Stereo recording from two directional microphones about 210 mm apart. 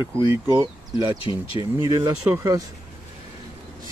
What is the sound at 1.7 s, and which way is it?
Speech, 15° right (ahead or behind).